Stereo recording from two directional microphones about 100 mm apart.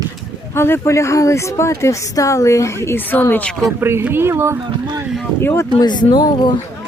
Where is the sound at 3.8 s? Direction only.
25° right (ahead or behind).